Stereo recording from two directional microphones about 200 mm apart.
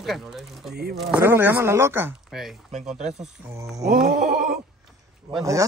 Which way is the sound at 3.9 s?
50° right (ahead or behind).